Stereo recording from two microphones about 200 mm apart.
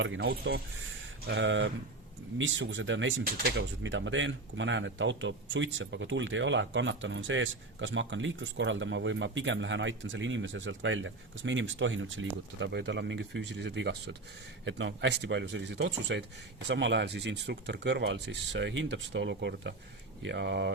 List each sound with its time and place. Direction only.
0.0 s speech: 60° right (ahead or behind)
1.3 s speech: 65° right (ahead or behind)
3.2 s speech: 45° right (ahead or behind)
3.6 s speech: 70° right (ahead or behind)